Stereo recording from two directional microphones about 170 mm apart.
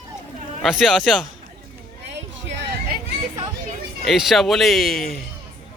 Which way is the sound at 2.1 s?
90° right.